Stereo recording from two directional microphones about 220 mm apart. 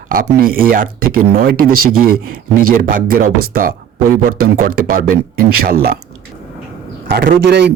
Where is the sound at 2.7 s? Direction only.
40° right (ahead or behind).